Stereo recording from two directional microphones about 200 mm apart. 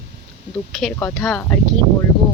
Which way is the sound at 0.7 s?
Centre (ahead or behind).